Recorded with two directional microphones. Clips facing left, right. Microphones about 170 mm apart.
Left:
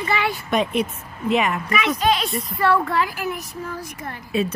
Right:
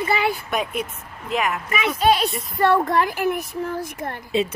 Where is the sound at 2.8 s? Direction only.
50° right (ahead or behind).